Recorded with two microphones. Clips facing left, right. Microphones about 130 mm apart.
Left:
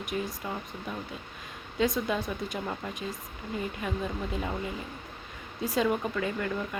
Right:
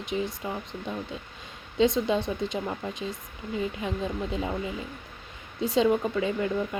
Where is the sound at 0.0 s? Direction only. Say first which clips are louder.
Right 3 dB; 25° right (ahead or behind).